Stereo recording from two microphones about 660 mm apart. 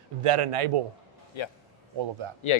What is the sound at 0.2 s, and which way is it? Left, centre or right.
Speech, right.